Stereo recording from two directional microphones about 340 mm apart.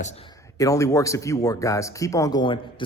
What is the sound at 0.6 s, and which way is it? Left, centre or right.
A man's voice, centre.